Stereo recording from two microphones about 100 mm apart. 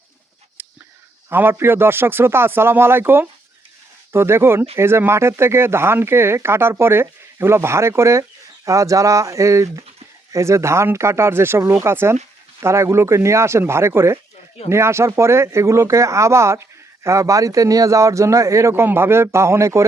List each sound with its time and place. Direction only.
1.3 s speech: 20° right (ahead or behind)